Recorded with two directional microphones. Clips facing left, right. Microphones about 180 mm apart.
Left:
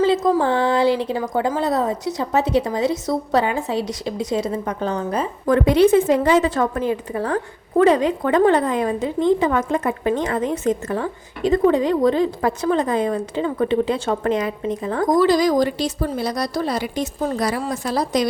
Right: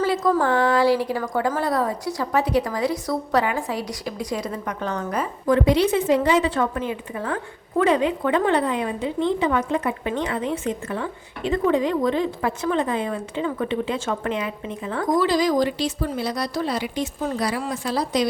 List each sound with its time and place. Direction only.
0.0 s a woman's voice: 20° left (ahead or behind)
5.5 s a woman's voice: 50° left (ahead or behind)